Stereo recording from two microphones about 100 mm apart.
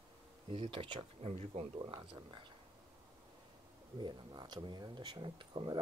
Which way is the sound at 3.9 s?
45° right (ahead or behind).